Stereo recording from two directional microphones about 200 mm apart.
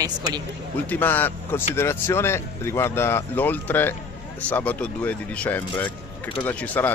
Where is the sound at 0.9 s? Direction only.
10° left (ahead or behind).